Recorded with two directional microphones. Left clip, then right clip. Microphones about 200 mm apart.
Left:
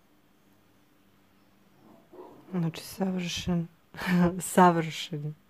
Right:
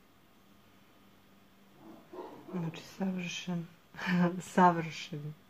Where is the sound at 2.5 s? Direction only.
45° left (ahead or behind).